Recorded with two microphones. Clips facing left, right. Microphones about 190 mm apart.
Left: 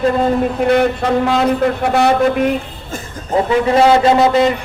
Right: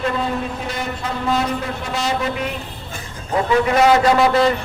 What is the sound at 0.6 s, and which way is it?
A man's voice, 65° left (ahead or behind).